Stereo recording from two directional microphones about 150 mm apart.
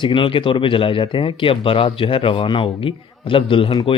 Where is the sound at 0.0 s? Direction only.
35° left (ahead or behind).